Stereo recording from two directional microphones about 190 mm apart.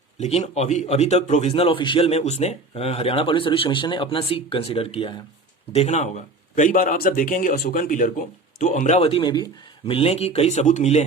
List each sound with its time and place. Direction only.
0.2 s a man's voice: 35° left (ahead or behind)